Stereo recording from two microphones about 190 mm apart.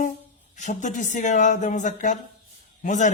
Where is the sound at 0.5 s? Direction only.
40° left (ahead or behind).